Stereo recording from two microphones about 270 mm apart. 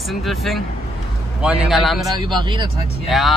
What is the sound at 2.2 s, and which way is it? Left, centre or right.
Speech, centre.